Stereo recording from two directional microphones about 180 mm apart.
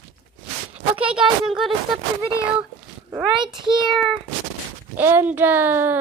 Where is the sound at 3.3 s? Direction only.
25° right (ahead or behind).